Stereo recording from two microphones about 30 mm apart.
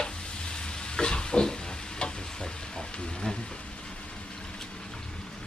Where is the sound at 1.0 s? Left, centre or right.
Left.